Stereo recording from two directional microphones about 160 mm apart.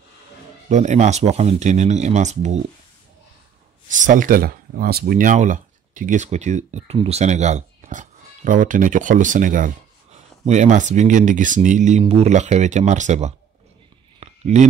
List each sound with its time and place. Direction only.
0.7 s speech: 45° right (ahead or behind)
3.9 s speech: 55° right (ahead or behind)
14.2 s a sound: 45° right (ahead or behind)